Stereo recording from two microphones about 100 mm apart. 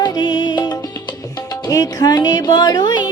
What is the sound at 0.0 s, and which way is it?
Music, 50° left (ahead or behind).